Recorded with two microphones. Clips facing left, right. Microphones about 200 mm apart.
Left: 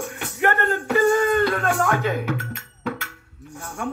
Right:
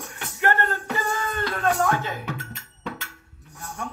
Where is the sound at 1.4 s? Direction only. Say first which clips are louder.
Left 2 dB; 70° left (ahead or behind).